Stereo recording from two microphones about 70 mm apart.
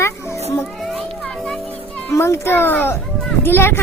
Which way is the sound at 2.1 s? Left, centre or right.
Left.